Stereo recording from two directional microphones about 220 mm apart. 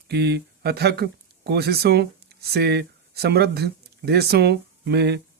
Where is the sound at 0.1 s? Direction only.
50° right (ahead or behind).